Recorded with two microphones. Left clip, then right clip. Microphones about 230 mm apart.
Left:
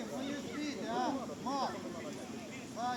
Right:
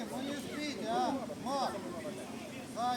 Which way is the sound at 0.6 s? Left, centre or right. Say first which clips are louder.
Right 3 dB; right.